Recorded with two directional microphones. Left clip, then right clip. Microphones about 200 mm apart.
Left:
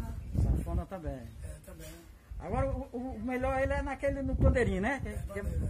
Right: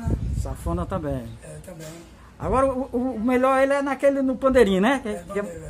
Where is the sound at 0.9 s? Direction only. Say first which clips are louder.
Right 14 dB; 15° right (ahead or behind).